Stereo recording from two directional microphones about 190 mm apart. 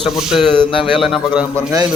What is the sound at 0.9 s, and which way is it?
Speech, centre (ahead or behind).